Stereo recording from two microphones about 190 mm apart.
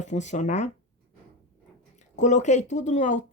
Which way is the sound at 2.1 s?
40° left (ahead or behind).